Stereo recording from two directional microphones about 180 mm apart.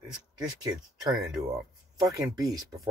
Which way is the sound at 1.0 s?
20° right (ahead or behind).